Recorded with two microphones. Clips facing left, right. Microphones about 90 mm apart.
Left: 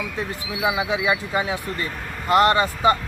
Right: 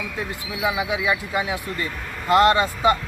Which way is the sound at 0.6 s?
25° left (ahead or behind).